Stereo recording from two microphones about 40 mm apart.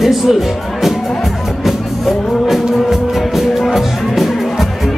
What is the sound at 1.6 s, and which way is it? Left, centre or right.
Music, centre.